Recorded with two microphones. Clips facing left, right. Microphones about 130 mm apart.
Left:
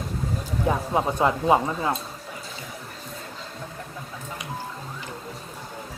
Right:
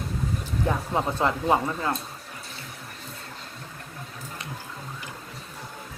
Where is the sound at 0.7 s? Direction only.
15° left (ahead or behind).